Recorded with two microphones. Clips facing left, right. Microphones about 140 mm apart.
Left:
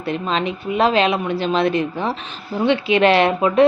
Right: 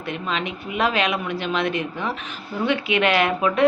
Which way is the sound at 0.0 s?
35° left (ahead or behind).